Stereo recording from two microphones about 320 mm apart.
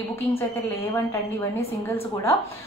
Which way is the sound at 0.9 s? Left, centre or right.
Centre.